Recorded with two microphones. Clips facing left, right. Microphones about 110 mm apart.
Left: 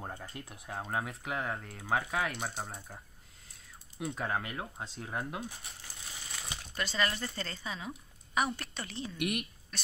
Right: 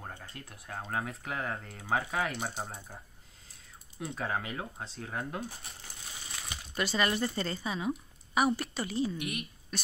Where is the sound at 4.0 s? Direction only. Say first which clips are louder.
Even; centre (ahead or behind).